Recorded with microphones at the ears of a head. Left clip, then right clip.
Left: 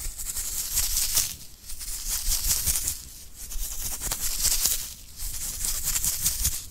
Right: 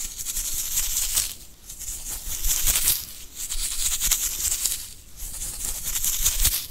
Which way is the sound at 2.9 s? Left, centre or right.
Right.